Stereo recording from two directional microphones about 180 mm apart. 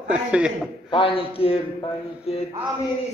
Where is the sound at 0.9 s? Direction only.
30° left (ahead or behind).